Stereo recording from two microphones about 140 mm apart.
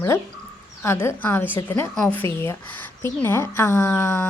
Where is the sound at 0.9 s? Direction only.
15° left (ahead or behind).